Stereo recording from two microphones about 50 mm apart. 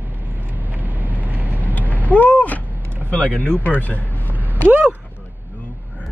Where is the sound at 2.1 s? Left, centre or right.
Left.